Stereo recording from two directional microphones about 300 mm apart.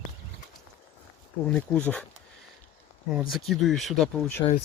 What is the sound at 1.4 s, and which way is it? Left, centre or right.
Speech, centre.